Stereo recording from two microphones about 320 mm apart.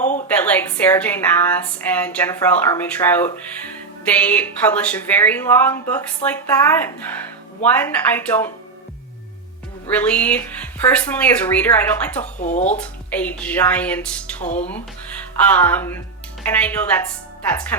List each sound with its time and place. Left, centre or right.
0.3 s a woman's voice: centre
9.9 s speech: centre
12.2 s speech: left
12.7 s speech: centre
14.4 s speech: left
15.4 s speech: centre